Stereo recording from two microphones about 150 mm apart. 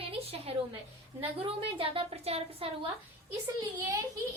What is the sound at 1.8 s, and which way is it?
Speech, 40° right (ahead or behind).